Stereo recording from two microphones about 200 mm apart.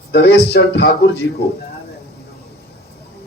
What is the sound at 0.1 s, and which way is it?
Speech, 55° left (ahead or behind).